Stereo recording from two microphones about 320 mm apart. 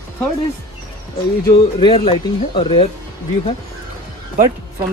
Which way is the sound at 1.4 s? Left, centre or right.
Centre.